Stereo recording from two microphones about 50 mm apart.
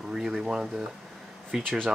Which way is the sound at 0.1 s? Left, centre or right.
Centre.